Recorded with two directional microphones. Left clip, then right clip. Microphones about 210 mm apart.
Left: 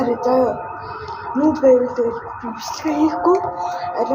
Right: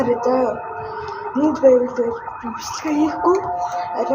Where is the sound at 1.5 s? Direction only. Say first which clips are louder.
Right 1 dB; centre (ahead or behind).